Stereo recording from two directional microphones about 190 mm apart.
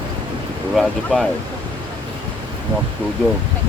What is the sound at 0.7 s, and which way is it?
Speech, centre (ahead or behind).